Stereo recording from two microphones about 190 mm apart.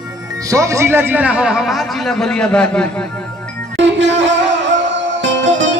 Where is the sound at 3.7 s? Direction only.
70° right (ahead or behind).